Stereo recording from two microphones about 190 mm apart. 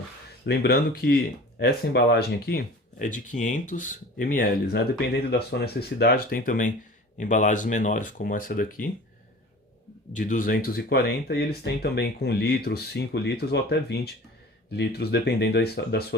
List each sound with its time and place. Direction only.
0.4 s speech: 60° left (ahead or behind)
3.0 s speech: 40° left (ahead or behind)
10.1 s speech: 40° left (ahead or behind); by 16.0 s 55° left (ahead or behind)